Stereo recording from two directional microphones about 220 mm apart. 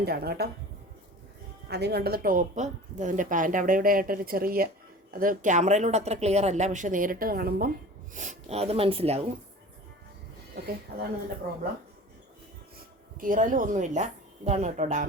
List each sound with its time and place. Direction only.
0.0 s speech: 45° right (ahead or behind)
1.6 s speech: 50° right (ahead or behind); by 9.2 s 25° right (ahead or behind)
11.4 s speech: 45° right (ahead or behind)
13.1 s speech: 40° right (ahead or behind)